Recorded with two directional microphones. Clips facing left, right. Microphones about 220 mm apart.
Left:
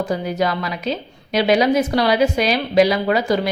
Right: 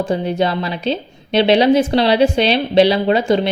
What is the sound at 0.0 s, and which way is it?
A woman's voice, 25° right (ahead or behind).